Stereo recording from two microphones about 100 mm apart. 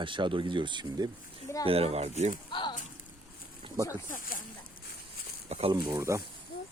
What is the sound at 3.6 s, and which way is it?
Snake, 60° right (ahead or behind).